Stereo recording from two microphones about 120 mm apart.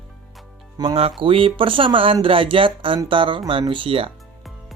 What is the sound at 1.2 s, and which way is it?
Speech, 50° right (ahead or behind).